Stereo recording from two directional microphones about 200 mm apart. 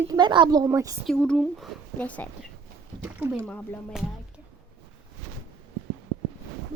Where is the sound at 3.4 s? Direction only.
5° left (ahead or behind).